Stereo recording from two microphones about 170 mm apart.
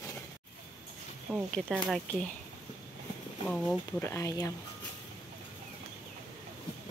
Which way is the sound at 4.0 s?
15° left (ahead or behind).